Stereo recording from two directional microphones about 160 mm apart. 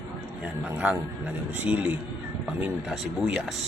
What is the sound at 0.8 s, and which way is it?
A man's voice, 10° right (ahead or behind).